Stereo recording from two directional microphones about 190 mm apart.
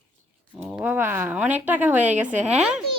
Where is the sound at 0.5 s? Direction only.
5° right (ahead or behind).